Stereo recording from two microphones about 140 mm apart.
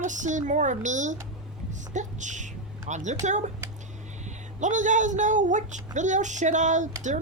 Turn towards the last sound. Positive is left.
turn(degrees=-60)  # may be behind; listen again after turning